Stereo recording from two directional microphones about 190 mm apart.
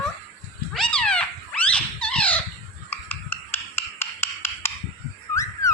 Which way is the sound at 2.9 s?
10° left (ahead or behind).